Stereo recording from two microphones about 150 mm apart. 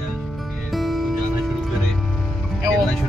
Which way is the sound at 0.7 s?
Centre (ahead or behind).